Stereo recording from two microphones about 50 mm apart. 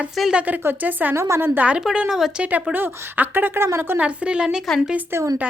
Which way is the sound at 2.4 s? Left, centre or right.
Right.